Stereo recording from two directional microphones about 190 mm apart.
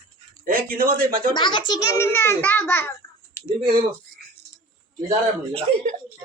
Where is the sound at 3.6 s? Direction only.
45° right (ahead or behind).